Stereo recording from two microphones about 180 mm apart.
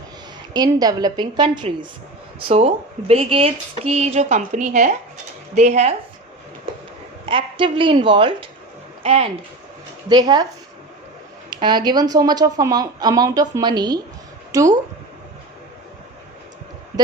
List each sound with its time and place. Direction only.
0.5 s speech: 20° right (ahead or behind); by 5.9 s 40° right (ahead or behind)
7.3 s speech: 30° right (ahead or behind)
11.5 s speech: 25° right (ahead or behind)